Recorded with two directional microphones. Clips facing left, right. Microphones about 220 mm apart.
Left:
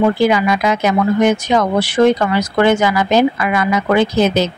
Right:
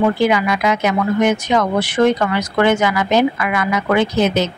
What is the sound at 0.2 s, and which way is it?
Speech, 35° left (ahead or behind).